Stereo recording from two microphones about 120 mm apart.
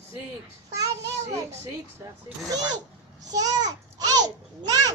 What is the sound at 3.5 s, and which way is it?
Babbling, 35° right (ahead or behind).